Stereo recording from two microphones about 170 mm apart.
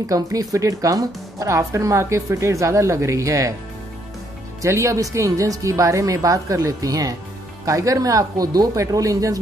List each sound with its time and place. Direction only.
0.0 s speech: 20° right (ahead or behind)
4.6 s speech: 15° right (ahead or behind)